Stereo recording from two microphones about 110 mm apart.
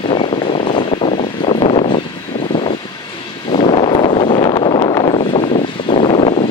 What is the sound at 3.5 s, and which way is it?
Wind noise, 65° left (ahead or behind).